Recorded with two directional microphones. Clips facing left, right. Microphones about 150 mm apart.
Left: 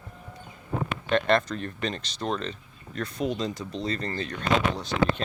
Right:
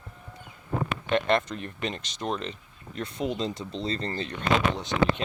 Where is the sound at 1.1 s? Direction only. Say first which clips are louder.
Left 2 dB; 20° right (ahead or behind).